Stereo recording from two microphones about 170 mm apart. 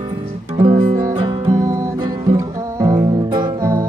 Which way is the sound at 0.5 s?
30° right (ahead or behind).